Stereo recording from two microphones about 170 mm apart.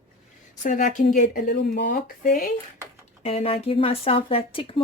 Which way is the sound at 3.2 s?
35° left (ahead or behind).